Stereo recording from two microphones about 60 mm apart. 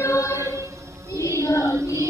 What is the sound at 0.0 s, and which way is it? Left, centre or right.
Choir, left.